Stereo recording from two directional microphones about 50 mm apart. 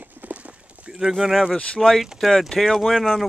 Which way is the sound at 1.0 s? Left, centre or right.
Centre.